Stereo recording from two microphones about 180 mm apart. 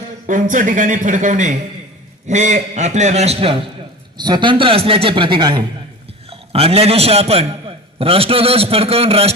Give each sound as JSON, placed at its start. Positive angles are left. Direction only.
{"t": 0.3, "sound": "a man's voice", "side_deg": -45}